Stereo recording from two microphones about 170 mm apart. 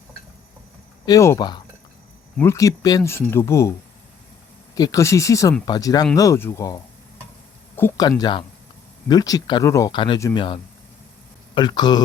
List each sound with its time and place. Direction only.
1.0 s speech: 20° left (ahead or behind)
7.8 s speech: 20° left (ahead or behind)
10.2 s speech: 15° left (ahead or behind)
11.5 s speech: 25° left (ahead or behind)